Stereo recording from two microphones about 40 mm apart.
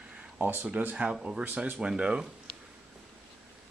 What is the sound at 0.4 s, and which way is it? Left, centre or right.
Speech, right.